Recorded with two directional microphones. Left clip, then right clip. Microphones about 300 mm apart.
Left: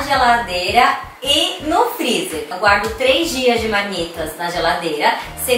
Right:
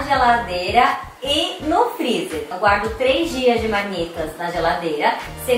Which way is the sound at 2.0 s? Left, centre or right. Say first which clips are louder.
Left 3 dB; right.